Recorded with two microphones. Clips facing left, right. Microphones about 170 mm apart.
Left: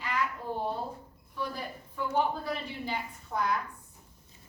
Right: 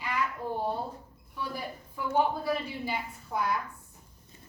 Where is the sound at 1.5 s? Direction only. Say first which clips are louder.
Right 1 dB; 10° right (ahead or behind).